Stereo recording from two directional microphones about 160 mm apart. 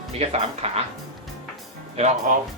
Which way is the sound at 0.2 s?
40° right (ahead or behind).